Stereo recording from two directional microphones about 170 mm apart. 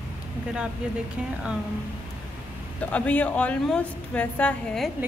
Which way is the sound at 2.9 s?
10° left (ahead or behind).